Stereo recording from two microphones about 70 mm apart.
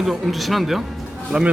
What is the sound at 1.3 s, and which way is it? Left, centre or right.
Speech, centre.